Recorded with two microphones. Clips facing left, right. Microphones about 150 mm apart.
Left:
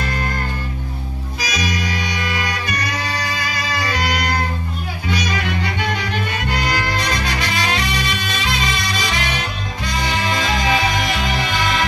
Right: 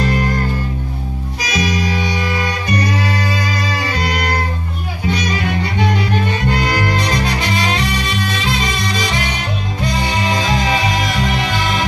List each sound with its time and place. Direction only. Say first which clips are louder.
1.5 s music: right 5 dB; 30° right (ahead or behind)
7.1 s music: right 4 dB; 25° right (ahead or behind)
10.0 s music: even; 20° right (ahead or behind)